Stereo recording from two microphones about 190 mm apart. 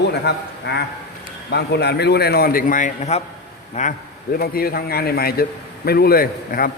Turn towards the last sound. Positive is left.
turn(degrees=50)  # may be behind; listen again after turning